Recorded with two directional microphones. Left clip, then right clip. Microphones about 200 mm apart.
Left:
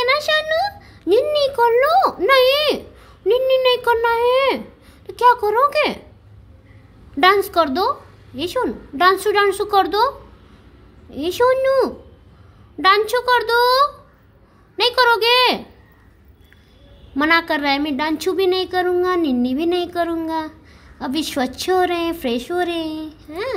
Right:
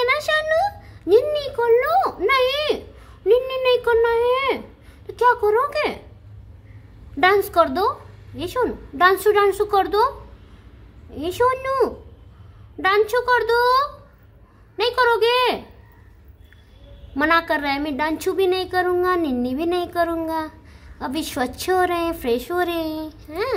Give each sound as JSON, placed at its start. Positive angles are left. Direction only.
{"t": 0.0, "sound": "a sound", "side_deg": 10}
{"t": 7.2, "sound": "a woman's voice", "side_deg": 10}
{"t": 17.1, "sound": "a woman's voice", "side_deg": 5}